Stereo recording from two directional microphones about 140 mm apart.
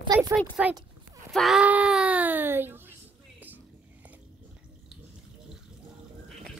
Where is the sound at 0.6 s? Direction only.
10° right (ahead or behind).